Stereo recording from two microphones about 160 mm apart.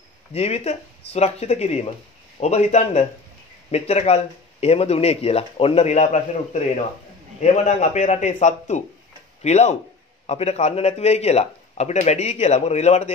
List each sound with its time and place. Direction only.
0.3 s a man's voice: 40° left (ahead or behind)